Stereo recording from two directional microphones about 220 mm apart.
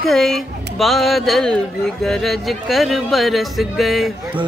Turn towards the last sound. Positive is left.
turn(degrees=0)  # may be behind; listen again after turning